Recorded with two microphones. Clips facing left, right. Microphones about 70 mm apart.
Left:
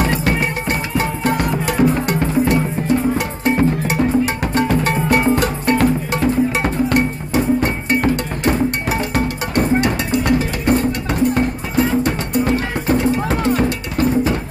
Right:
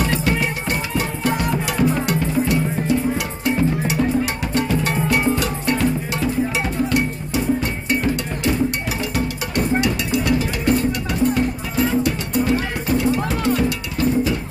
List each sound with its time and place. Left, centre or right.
0.0 s music: left